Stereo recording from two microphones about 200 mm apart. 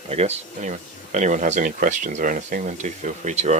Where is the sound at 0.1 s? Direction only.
30° right (ahead or behind).